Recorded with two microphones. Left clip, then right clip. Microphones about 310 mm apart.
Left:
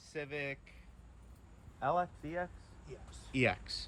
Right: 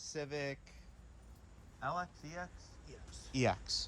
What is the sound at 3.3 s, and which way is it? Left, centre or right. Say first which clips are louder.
Speech: left 1 dB; centre.